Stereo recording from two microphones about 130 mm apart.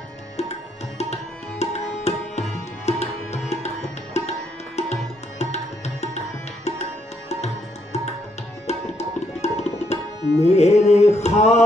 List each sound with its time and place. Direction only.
0.4 s tabla: 55° left (ahead or behind)
8.6 s music: 55° left (ahead or behind)